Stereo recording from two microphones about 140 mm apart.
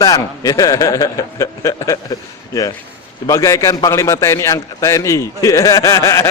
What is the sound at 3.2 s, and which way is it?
A man's voice, 20° left (ahead or behind).